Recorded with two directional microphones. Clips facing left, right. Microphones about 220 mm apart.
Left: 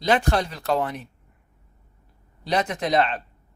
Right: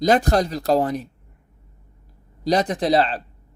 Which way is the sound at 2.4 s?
35° right (ahead or behind).